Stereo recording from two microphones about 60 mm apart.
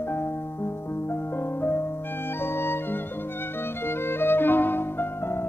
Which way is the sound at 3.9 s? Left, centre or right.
Left.